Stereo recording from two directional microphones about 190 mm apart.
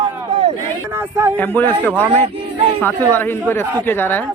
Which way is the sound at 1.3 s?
10° left (ahead or behind).